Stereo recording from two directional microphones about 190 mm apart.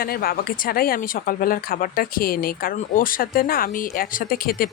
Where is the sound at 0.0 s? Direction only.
50° left (ahead or behind).